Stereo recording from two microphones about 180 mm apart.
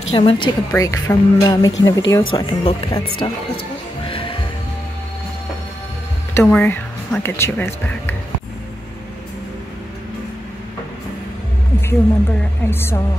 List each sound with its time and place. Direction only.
0.1 s speech: 30° left (ahead or behind)
0.7 s speech: 15° left (ahead or behind)
4.1 s music: 30° left (ahead or behind)
6.4 s speech: 10° left (ahead or behind)
11.8 s speech: 10° left (ahead or behind)